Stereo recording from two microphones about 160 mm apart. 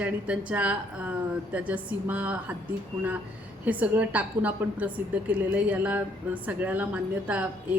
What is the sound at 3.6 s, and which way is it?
A woman's voice, 10° right (ahead or behind).